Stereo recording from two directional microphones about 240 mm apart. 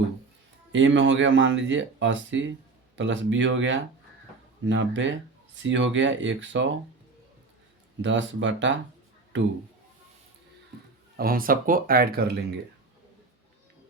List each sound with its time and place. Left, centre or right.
0.7 s speech: right
8.0 s speech: right
11.2 s speech: right